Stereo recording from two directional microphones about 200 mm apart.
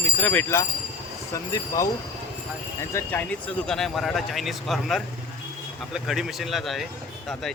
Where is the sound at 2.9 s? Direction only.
10° left (ahead or behind).